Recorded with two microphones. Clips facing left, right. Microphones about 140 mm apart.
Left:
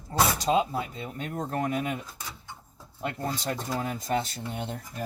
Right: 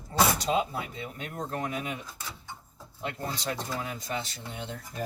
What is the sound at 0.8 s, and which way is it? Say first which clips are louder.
Speech: left 3 dB; 40° left (ahead or behind).